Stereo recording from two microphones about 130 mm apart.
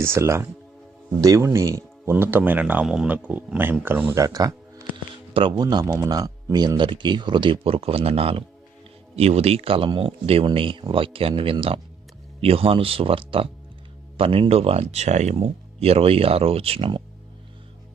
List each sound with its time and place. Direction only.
0.0 s speech: 20° right (ahead or behind)
4.1 s speech: 25° right (ahead or behind)
5.3 s speech: 40° right (ahead or behind)